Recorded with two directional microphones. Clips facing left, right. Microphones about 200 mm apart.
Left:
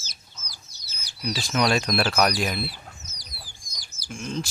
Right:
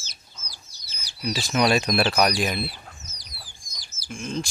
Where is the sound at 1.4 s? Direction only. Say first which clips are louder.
Right 2 dB; 10° right (ahead or behind).